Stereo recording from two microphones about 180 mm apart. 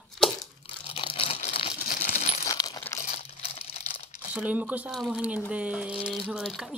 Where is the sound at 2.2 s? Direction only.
35° left (ahead or behind).